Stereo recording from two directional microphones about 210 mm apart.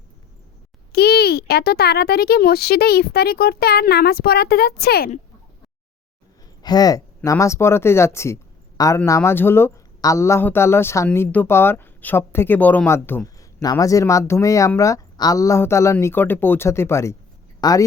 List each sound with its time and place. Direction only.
0.9 s a child's voice: 50° left (ahead or behind)
6.6 s speech: 20° left (ahead or behind)